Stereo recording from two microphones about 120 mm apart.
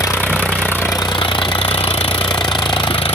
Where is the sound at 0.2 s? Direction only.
15° left (ahead or behind).